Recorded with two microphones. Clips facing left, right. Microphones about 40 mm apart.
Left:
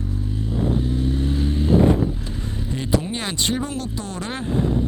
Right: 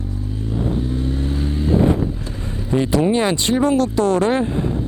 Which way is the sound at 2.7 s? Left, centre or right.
Right.